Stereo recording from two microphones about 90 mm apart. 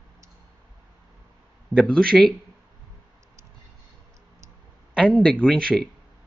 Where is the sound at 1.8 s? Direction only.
10° left (ahead or behind).